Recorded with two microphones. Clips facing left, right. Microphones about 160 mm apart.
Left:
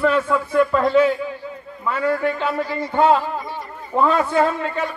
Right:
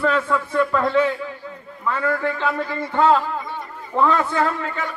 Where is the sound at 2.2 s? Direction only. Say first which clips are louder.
Left 2 dB; 15° left (ahead or behind).